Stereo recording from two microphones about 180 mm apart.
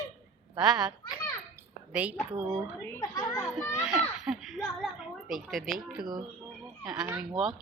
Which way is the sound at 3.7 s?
5° right (ahead or behind).